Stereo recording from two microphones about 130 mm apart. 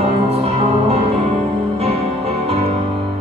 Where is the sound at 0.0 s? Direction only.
50° right (ahead or behind).